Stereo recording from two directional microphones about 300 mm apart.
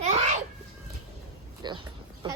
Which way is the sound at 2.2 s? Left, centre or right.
Centre.